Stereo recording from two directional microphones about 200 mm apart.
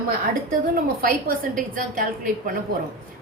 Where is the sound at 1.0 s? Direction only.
45° right (ahead or behind).